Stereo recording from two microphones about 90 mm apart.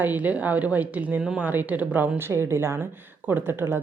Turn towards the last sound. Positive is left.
turn(degrees=-25)  # may be behind; listen again after turning